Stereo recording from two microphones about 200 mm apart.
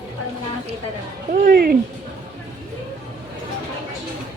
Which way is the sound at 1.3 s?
50° right (ahead or behind).